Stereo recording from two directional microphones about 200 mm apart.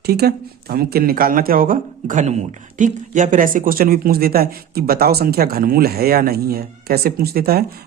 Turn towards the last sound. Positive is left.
turn(degrees=-50)  # may be behind; listen again after turning